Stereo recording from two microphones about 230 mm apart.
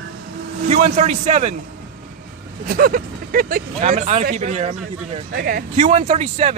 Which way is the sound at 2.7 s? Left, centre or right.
Right.